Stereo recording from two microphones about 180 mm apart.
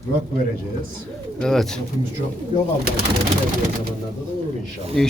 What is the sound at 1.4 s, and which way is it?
Speech, centre (ahead or behind).